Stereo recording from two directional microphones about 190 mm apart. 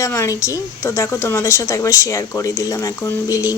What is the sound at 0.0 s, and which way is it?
A woman's voice, 15° left (ahead or behind).